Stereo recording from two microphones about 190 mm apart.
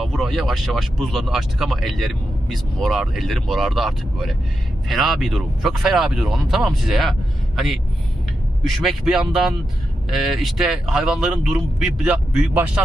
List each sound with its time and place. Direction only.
0.0 s speech: centre (ahead or behind)
8.8 s speech: centre (ahead or behind)